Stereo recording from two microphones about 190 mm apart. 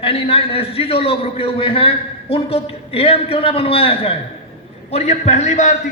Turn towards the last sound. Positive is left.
turn(degrees=40)  # may be behind; listen again after turning